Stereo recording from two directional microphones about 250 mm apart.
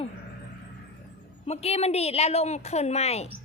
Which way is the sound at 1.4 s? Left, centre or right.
Left.